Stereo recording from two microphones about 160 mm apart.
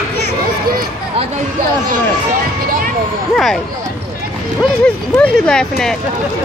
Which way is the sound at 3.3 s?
Centre (ahead or behind).